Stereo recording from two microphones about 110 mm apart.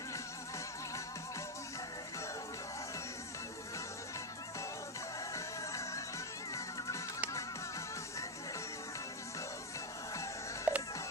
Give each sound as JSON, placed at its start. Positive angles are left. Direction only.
{"t": 5.3, "sound": "music", "side_deg": 30}
{"t": 10.7, "sound": "music", "side_deg": -10}